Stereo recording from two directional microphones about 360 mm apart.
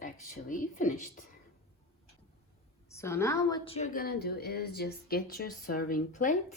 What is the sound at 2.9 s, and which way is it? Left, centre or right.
A woman's voice, centre.